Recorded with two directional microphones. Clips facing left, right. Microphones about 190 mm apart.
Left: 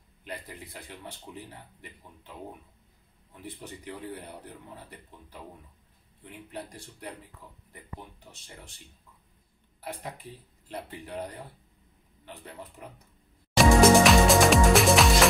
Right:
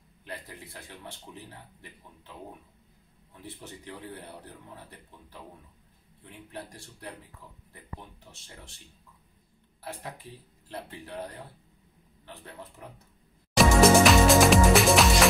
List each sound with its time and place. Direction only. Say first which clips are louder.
0.2 s speech: left 1 dB; 15° left (ahead or behind)
3.4 s speech: left 2 dB; 15° left (ahead or behind)
6.5 s speech: left 1 dB; 15° left (ahead or behind)
9.8 s speech: left 1 dB; 15° left (ahead or behind)
13.6 s music: left 1 dB; centre (ahead or behind)